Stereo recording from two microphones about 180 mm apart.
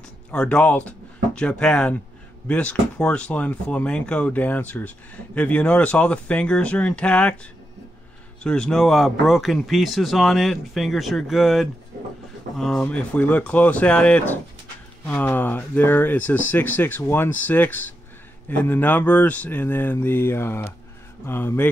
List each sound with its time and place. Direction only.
0.3 s speech: 5° left (ahead or behind)
8.5 s speech: 5° left (ahead or behind)